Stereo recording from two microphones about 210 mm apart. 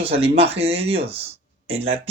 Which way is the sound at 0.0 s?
25° right (ahead or behind).